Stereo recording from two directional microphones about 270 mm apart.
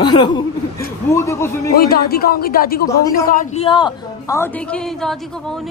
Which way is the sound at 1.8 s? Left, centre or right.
Left.